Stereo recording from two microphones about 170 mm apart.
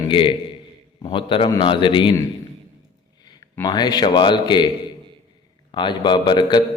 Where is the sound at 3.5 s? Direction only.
25° left (ahead or behind).